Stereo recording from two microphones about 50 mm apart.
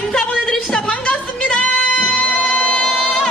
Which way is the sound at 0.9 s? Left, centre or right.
Left.